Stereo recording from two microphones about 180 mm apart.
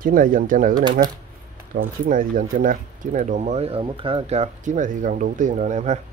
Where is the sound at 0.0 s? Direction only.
50° right (ahead or behind).